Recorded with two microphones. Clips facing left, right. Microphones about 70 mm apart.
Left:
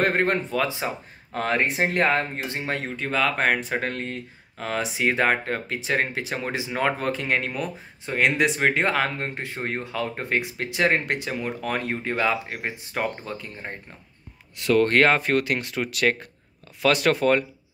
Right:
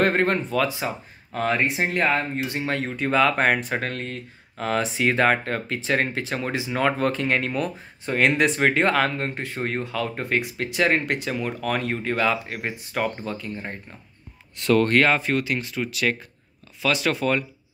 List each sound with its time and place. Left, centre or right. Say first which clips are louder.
0.0 s speech: right 1 dB; centre
1.3 s speech: right 1 dB; left
2.6 s speech: right 1 dB; centre
2.9 s speech: right 5 dB; centre
3.8 s speech: left 1 dB; left
4.6 s speech: right 3 dB; centre; by 13.7 s left
14.9 s speech: left 1 dB; left